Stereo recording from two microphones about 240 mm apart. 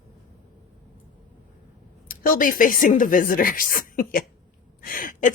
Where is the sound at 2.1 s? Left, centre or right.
Left.